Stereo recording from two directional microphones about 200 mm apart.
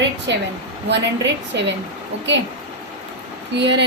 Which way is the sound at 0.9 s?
60° right (ahead or behind).